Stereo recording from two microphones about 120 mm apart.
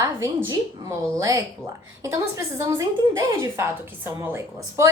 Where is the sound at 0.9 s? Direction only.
25° right (ahead or behind).